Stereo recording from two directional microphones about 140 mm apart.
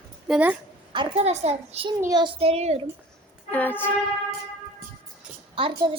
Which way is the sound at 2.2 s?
40° right (ahead or behind).